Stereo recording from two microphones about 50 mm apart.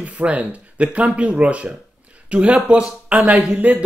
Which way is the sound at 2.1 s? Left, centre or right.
Right.